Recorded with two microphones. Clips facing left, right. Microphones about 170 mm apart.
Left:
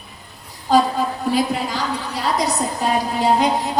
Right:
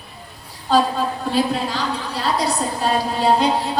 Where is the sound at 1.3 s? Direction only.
15° left (ahead or behind).